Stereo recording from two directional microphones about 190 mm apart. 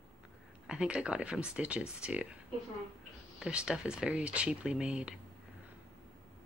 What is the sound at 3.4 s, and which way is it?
Speech, 5° right (ahead or behind).